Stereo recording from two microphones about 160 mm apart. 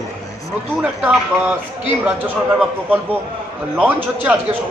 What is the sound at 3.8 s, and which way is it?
Speech, 10° right (ahead or behind).